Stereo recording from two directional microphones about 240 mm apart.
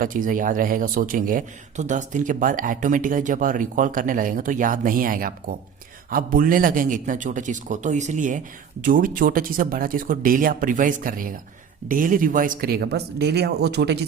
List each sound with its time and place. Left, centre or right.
0.0 s a man's voice: right